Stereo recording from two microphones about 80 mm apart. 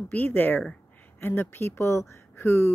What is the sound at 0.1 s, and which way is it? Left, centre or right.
A woman's voice, left.